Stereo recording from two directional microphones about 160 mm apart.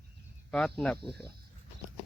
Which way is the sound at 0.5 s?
5° left (ahead or behind).